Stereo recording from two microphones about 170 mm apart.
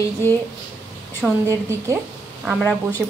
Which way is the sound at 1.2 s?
Centre (ahead or behind).